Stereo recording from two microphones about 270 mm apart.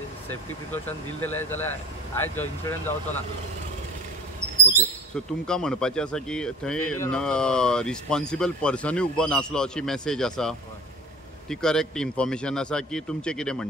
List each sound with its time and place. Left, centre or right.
0.3 s speech: centre
5.1 s speech: centre